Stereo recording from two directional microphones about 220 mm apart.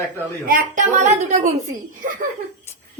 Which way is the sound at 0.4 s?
35° right (ahead or behind).